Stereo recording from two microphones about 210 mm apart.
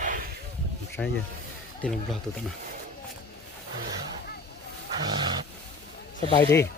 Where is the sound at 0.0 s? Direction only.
40° right (ahead or behind).